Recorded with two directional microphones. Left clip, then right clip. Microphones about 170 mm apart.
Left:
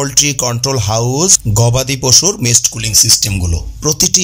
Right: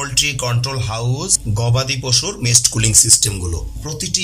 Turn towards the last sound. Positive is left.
turn(degrees=40)  # may be behind; listen again after turning